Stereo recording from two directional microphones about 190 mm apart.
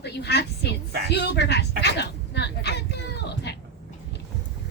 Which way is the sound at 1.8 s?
60° left (ahead or behind).